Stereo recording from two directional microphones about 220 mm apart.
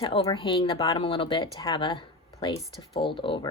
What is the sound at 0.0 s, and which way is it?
Speech, 25° left (ahead or behind).